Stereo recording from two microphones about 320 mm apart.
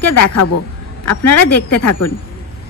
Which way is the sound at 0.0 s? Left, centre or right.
Left.